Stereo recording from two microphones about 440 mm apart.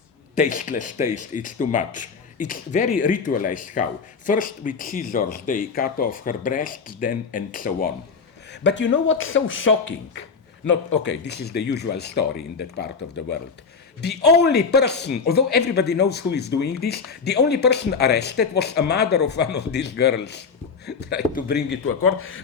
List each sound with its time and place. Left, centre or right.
0.3 s a man's voice: centre
14.2 s a man's voice: left